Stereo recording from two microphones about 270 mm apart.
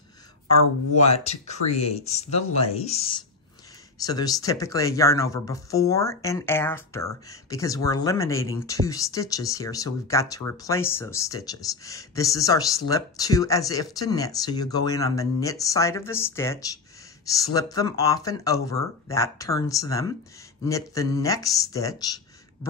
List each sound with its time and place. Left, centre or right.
0.9 s speech: left